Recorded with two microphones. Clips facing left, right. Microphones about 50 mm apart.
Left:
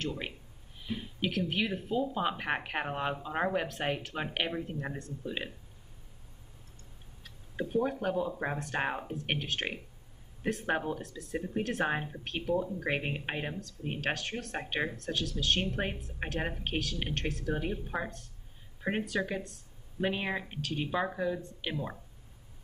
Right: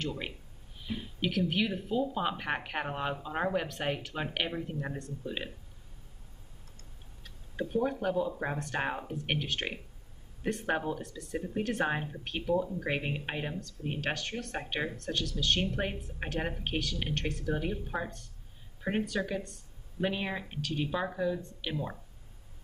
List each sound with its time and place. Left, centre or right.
1.2 s speech: centre
7.2 s speech: centre